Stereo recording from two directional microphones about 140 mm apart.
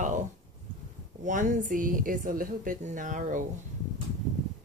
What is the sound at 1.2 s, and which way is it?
A woman's voice, 60° right (ahead or behind).